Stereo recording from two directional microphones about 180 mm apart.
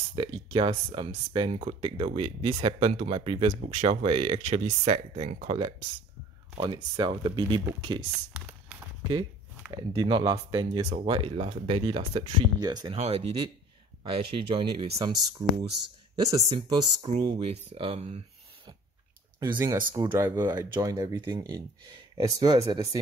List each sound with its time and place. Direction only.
0.1 s speech: 25° right (ahead or behind)
8.1 s a sound: 5° right (ahead or behind)
9.7 s speech: 25° right (ahead or behind)
12.9 s speech: 35° right (ahead or behind)
19.4 s speech: 20° right (ahead or behind)